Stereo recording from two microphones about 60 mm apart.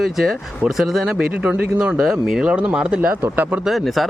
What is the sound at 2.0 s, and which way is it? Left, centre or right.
Speech, centre.